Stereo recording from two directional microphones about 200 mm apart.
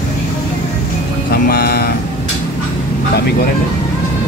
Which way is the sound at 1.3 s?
45° left (ahead or behind).